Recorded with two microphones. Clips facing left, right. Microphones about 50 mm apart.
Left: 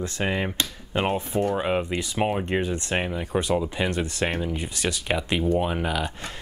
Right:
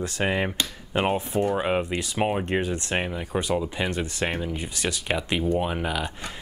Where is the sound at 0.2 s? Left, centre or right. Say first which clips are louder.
Right 1 dB; centre.